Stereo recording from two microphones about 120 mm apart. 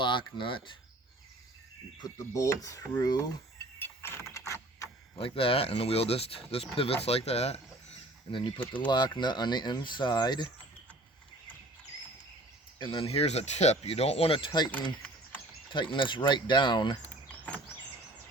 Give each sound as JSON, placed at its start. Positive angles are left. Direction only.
{"t": 0.0, "sound": "speech", "side_deg": 40}
{"t": 2.0, "sound": "speech", "side_deg": 25}
{"t": 3.8, "sound": "vehicle", "side_deg": 20}
{"t": 5.1, "sound": "speech", "side_deg": 50}
{"t": 8.3, "sound": "speech", "side_deg": 45}
{"t": 12.8, "sound": "speech", "side_deg": 50}
{"t": 15.7, "sound": "speech", "side_deg": 40}
{"t": 17.0, "sound": "a sound", "side_deg": 10}